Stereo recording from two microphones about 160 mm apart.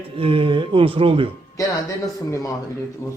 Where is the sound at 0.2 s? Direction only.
35° right (ahead or behind).